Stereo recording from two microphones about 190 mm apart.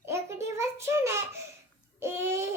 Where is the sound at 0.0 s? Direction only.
15° right (ahead or behind).